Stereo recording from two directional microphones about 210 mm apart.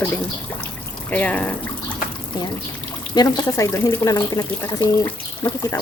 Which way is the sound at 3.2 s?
20° left (ahead or behind).